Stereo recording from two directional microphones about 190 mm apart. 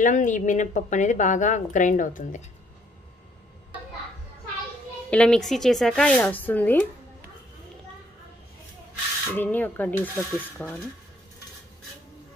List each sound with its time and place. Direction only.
0.0 s a woman's voice: 40° left (ahead or behind)
5.1 s speech: 5° left (ahead or behind)
9.3 s speech: 10° left (ahead or behind)